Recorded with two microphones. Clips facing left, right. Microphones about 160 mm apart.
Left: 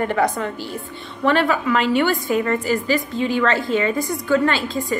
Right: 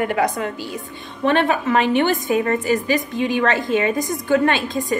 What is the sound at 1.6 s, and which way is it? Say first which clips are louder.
Speech: right 1 dB; 55° right (ahead or behind).